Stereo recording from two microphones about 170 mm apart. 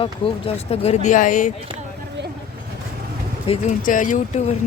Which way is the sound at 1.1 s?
50° left (ahead or behind).